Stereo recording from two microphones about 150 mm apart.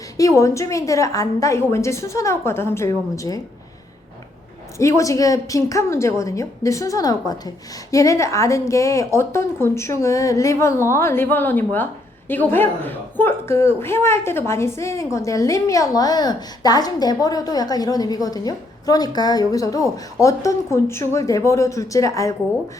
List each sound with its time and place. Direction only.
0.2 s a woman's voice: 20° left (ahead or behind)
4.8 s a woman's voice: 20° left (ahead or behind)